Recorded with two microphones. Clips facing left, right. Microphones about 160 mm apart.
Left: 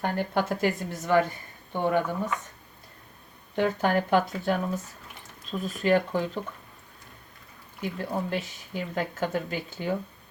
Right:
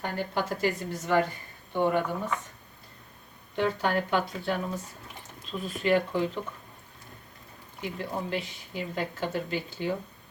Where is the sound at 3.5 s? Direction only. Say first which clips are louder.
Left 2 dB; 45° left (ahead or behind).